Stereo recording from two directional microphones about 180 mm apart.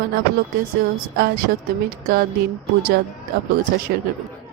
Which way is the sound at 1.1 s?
60° right (ahead or behind).